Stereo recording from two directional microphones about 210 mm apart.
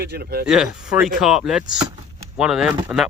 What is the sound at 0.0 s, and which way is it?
Speech, 45° right (ahead or behind).